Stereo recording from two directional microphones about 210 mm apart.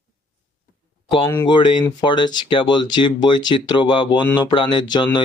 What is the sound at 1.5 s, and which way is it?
Speech, 25° left (ahead or behind).